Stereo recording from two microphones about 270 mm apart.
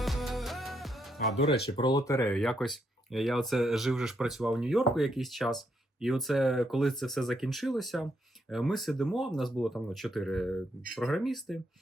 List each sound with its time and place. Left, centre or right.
0.0 s music: centre
1.4 s speech: left
1.7 s speech: centre